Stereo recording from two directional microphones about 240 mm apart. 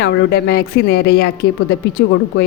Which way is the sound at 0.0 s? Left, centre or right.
Left.